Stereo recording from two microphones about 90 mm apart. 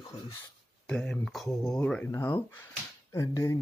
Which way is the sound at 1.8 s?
15° left (ahead or behind).